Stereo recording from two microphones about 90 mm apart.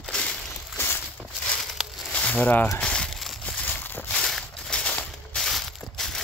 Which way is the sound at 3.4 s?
20° left (ahead or behind).